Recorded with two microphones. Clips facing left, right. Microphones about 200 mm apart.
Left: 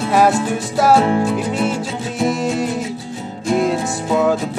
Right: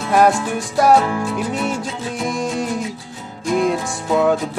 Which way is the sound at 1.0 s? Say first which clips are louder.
Left 4 dB; 25° left (ahead or behind).